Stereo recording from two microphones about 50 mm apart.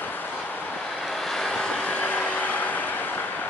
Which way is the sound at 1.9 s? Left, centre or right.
Left.